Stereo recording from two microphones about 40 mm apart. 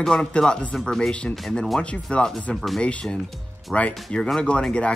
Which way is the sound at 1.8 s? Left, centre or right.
Left.